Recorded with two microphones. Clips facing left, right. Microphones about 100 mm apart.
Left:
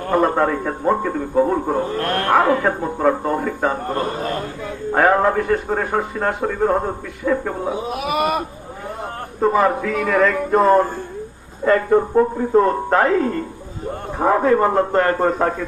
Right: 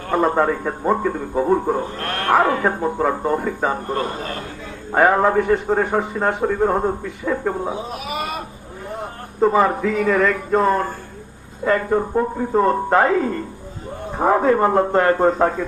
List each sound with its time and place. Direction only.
0.2 s a man's voice: 5° right (ahead or behind)
4.9 s a man's voice: 5° right (ahead or behind)
7.9 s a sound: 65° left (ahead or behind)
9.4 s a man's voice: 5° right (ahead or behind)
11.6 s a man's voice: 5° right (ahead or behind)